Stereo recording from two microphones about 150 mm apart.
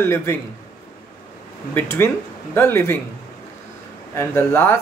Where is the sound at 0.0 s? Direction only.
15° left (ahead or behind).